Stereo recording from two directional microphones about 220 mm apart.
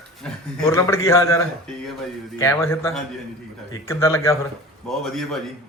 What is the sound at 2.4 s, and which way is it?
Speech, 10° left (ahead or behind).